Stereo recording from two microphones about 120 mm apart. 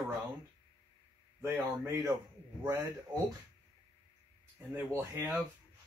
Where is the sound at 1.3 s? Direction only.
20° right (ahead or behind).